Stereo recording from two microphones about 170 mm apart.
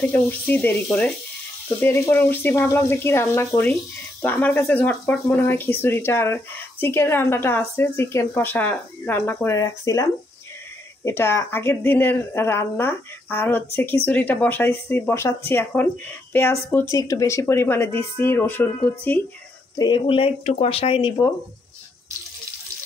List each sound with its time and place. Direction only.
0.0 s speech: 10° left (ahead or behind)
11.1 s speech: 15° left (ahead or behind)
16.9 s speech: 20° left (ahead or behind)
19.8 s speech: 30° left (ahead or behind)